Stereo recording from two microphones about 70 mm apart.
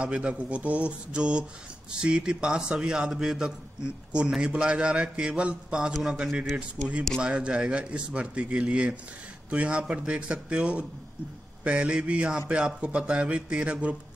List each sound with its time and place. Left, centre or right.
0.0 s a man's voice: centre